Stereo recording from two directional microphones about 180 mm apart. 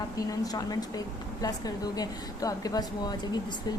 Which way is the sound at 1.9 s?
20° left (ahead or behind).